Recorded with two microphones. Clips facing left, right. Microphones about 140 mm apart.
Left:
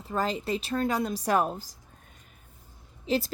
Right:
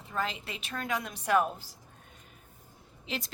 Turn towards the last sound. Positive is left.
turn(degrees=35)  # may be behind; listen again after turning